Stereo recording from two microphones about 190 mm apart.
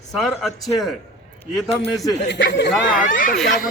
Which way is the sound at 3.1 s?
45° left (ahead or behind).